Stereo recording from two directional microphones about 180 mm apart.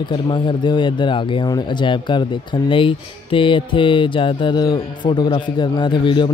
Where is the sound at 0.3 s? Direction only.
25° left (ahead or behind).